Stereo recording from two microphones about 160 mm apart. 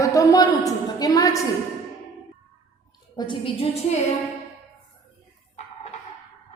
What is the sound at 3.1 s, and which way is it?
Speech, 30° left (ahead or behind).